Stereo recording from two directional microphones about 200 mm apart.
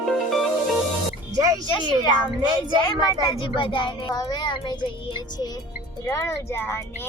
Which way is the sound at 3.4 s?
25° left (ahead or behind).